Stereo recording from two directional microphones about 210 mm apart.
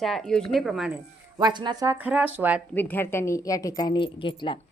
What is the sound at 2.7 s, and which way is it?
A woman's voice, 10° left (ahead or behind).